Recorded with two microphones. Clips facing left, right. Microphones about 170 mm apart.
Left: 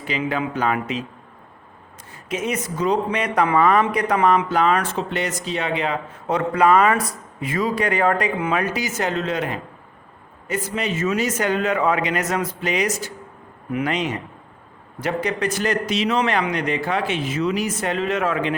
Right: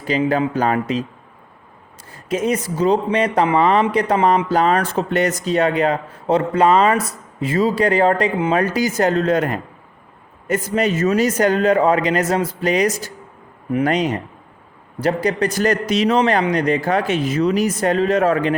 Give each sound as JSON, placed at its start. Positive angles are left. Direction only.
{"t": 0.0, "sound": "a man's voice", "side_deg": -40}
{"t": 2.3, "sound": "a man's voice", "side_deg": -35}
{"t": 6.2, "sound": "a man's voice", "side_deg": -30}